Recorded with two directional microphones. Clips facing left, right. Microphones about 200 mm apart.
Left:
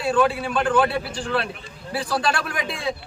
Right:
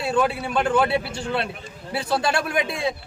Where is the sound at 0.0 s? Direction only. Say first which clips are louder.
Left 2 dB; 25° right (ahead or behind).